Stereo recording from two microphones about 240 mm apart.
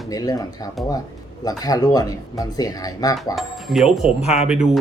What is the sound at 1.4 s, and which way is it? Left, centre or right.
Speech, centre.